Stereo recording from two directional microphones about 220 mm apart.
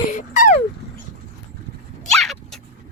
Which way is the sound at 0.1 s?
35° left (ahead or behind).